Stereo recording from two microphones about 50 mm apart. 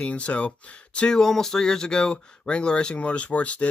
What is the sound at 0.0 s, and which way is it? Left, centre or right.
Speech, left.